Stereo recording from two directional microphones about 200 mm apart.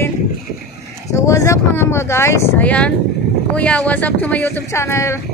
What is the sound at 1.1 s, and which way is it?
Speech, 15° left (ahead or behind).